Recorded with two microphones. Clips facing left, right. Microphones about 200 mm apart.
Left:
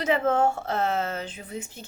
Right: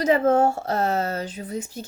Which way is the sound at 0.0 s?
40° right (ahead or behind).